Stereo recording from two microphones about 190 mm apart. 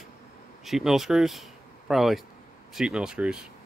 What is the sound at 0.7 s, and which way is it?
Speech, centre (ahead or behind).